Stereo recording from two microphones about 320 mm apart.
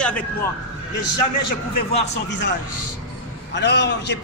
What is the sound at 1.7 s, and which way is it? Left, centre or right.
Speech, left.